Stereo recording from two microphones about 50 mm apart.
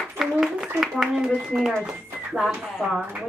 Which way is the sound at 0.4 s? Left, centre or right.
Centre.